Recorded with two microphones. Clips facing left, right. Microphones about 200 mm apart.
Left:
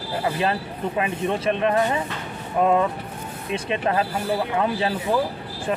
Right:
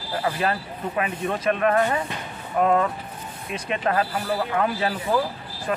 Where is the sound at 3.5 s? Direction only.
30° left (ahead or behind).